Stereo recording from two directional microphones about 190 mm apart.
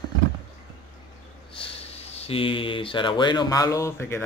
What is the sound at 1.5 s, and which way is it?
Speech, 30° left (ahead or behind).